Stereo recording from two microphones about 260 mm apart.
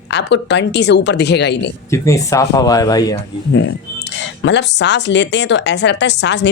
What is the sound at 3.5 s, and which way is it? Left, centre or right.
Speech, left.